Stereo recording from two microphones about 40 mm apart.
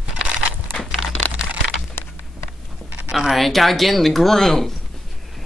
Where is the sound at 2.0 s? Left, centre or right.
Left.